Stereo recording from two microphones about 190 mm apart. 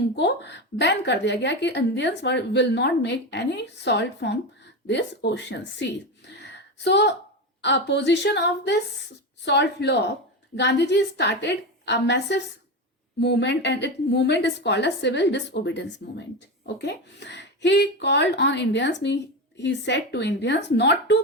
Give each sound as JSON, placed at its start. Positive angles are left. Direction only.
{"t": 0.2, "sound": "a woman's voice", "side_deg": 65}